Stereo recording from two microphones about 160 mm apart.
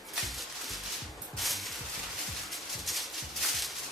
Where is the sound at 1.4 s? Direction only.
Centre (ahead or behind).